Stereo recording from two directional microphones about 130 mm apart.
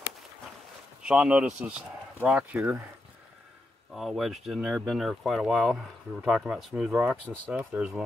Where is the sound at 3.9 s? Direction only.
Centre (ahead or behind).